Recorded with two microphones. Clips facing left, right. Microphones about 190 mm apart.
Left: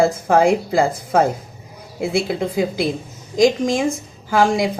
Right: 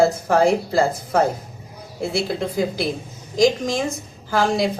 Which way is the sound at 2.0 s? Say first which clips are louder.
Left 3 dB; 15° left (ahead or behind).